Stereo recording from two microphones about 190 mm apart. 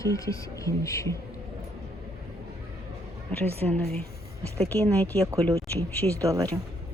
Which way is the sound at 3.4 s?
30° right (ahead or behind).